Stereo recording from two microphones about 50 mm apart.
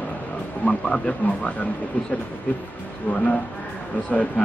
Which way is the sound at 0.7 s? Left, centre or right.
Centre.